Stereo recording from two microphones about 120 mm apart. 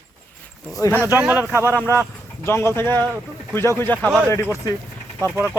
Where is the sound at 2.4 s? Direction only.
20° left (ahead or behind).